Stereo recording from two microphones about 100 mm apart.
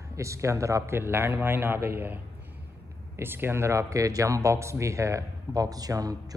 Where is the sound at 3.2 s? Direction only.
20° right (ahead or behind); by 6.3 s 40° right (ahead or behind).